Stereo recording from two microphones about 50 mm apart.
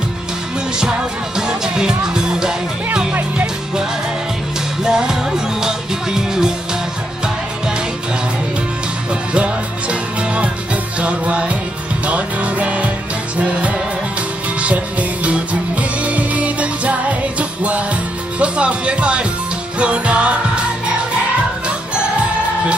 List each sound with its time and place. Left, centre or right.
1.4 s music: centre
2.9 s music: right
4.8 s music: centre
9.3 s music: right